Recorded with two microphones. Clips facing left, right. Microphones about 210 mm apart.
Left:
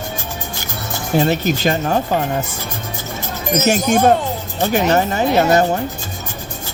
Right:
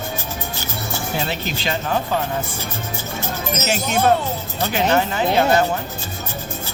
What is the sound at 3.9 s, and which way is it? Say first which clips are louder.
Speech: left 1 dB; 45° left (ahead or behind).